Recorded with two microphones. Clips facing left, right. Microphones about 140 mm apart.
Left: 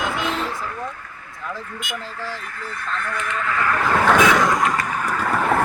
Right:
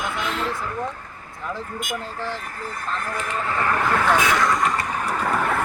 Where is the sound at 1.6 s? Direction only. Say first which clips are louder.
Right 2 dB; 40° right (ahead or behind).